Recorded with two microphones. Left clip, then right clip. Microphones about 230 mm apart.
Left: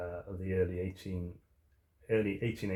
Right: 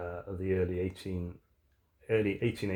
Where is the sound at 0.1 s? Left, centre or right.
Right.